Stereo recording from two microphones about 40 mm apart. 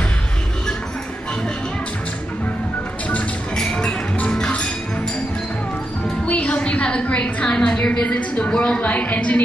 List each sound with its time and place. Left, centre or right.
3.5 s music: left
6.2 s a sound: left
7.7 s a woman's voice: left
8.8 s a woman's voice: left